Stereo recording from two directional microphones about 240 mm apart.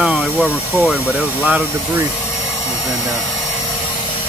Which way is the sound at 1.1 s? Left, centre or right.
Centre.